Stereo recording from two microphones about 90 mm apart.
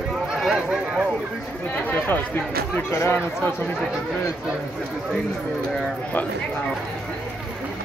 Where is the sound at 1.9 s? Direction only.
20° left (ahead or behind).